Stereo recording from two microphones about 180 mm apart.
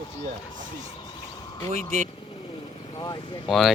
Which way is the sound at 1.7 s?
40° right (ahead or behind).